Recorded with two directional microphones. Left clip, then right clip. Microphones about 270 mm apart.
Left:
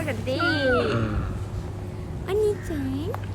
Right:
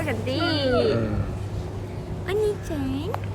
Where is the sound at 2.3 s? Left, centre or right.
Centre.